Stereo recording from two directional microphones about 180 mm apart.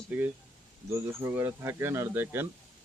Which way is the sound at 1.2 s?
15° right (ahead or behind).